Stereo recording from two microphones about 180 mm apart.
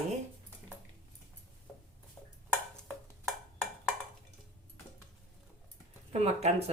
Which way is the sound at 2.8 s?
Centre (ahead or behind).